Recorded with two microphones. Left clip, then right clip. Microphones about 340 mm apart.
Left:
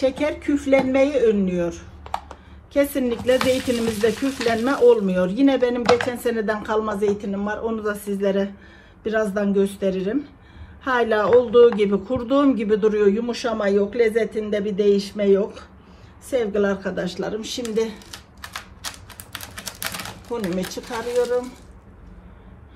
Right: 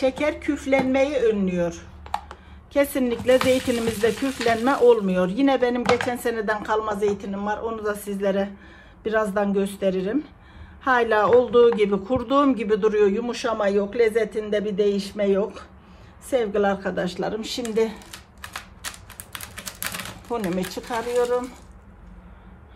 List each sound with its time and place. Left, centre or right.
0.0 s speech: right
2.0 s computer keyboard: centre
2.7 s speech: right
17.9 s typewriter: centre
19.5 s typing: centre
20.5 s speech: centre